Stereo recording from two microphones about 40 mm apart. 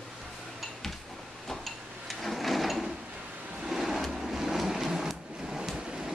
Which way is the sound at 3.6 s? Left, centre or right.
Centre.